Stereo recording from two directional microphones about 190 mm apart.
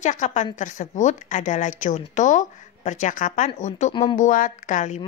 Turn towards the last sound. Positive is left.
turn(degrees=40)  # may be behind; listen again after turning